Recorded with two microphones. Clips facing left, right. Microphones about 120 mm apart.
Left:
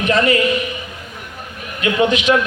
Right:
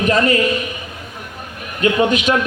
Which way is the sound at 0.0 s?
40° right (ahead or behind).